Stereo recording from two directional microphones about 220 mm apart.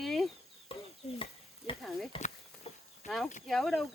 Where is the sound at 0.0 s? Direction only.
Centre (ahead or behind).